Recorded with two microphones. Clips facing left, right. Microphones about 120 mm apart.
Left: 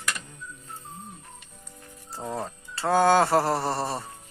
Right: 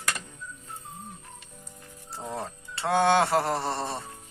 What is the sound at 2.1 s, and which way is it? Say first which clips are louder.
Speech: left 2 dB; centre (ahead or behind).